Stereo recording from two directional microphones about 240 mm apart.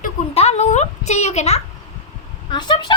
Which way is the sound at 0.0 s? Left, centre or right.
Left.